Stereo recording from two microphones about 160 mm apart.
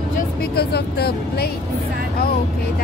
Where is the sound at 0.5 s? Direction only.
80° left.